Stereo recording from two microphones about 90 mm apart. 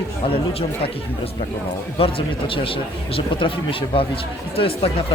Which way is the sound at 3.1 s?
80° left.